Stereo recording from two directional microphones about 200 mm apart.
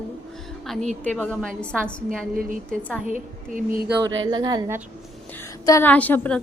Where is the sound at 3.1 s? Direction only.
40° right (ahead or behind).